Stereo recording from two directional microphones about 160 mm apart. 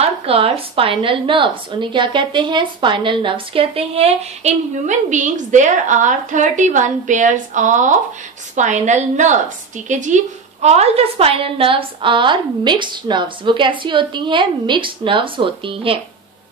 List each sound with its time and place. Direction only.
0.0 s a woman's voice: 35° right (ahead or behind)